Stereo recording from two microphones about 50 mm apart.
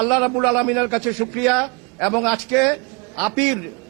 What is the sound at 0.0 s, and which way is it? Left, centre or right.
A man's voice, centre.